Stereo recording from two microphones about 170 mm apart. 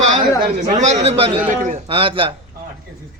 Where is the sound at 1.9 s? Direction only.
30° right (ahead or behind).